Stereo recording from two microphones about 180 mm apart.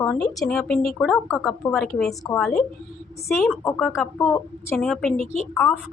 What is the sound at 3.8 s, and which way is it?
Speech, centre (ahead or behind).